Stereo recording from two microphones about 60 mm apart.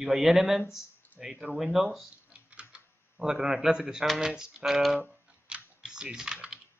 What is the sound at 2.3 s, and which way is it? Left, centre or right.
Typing, centre.